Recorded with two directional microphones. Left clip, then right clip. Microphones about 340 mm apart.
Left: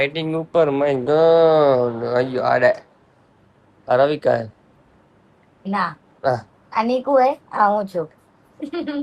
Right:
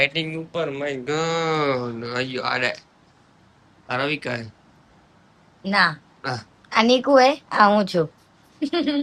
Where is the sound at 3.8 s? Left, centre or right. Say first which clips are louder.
Left 9 dB; centre.